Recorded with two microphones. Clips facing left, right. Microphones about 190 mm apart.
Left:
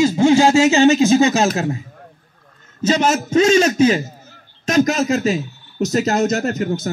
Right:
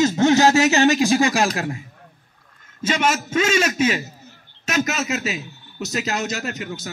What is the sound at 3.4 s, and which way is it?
A man's voice, 25° left (ahead or behind).